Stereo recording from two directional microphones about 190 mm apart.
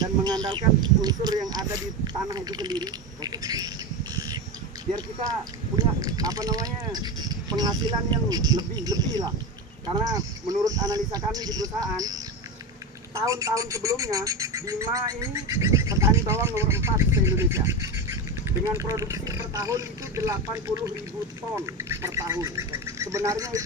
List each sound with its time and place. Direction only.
0.0 s speech: 20° right (ahead or behind)